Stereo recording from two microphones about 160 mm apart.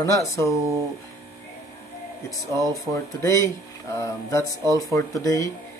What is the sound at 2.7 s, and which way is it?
Speech, 20° left (ahead or behind).